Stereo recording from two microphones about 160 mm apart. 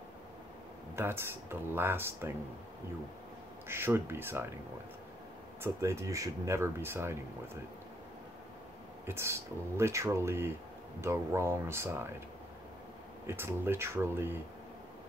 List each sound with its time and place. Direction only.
0.9 s speech: 15° right (ahead or behind)
3.6 s speech: 15° right (ahead or behind)
5.6 s speech: 20° right (ahead or behind)
9.0 s speech: 15° right (ahead or behind)
13.3 s speech: 15° right (ahead or behind)